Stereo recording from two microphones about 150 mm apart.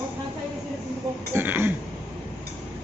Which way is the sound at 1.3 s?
15° right (ahead or behind).